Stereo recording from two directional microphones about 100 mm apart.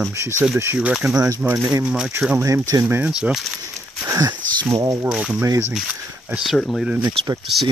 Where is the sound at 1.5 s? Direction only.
35° right (ahead or behind).